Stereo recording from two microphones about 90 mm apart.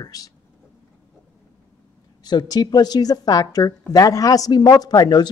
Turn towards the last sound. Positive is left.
turn(degrees=50)  # may be behind; listen again after turning